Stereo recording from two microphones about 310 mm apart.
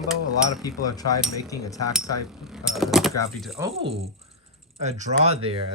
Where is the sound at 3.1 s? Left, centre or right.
Centre.